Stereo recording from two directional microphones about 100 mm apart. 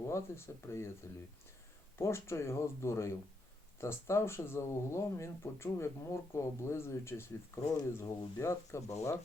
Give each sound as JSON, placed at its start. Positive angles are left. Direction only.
{"t": 0.1, "sound": "speech", "side_deg": 25}
{"t": 2.0, "sound": "speech", "side_deg": 25}